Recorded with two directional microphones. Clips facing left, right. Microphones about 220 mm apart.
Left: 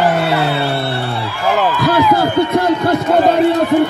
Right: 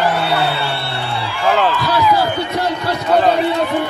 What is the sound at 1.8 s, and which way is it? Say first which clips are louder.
A man's voice: left 3 dB; 50° left (ahead or behind).